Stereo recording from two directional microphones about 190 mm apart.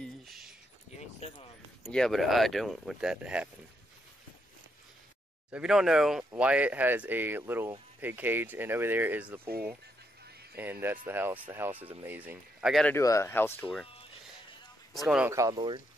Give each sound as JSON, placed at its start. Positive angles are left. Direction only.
{"t": 0.9, "sound": "a sound", "side_deg": 30}
{"t": 1.8, "sound": "speech", "side_deg": 0}
{"t": 5.5, "sound": "speech", "side_deg": -5}
{"t": 10.5, "sound": "speech", "side_deg": -10}
{"t": 12.8, "sound": "speech", "side_deg": 15}
{"t": 15.0, "sound": "speech", "side_deg": -5}
{"t": 15.3, "sound": "speech", "side_deg": -20}